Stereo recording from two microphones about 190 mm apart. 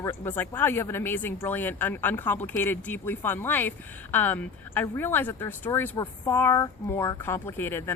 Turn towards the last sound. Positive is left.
turn(degrees=10)  # may be behind; listen again after turning